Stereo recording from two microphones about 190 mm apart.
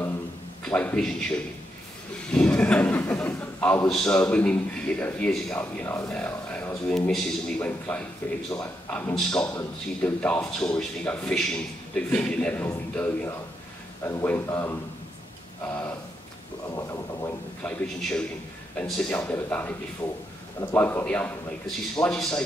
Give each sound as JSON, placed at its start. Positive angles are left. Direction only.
{"t": 0.7, "sound": "a man's voice", "side_deg": 10}
{"t": 9.3, "sound": "a man's voice", "side_deg": 15}
{"t": 16.7, "sound": "a man's voice", "side_deg": 15}
{"t": 20.7, "sound": "a man's voice", "side_deg": 10}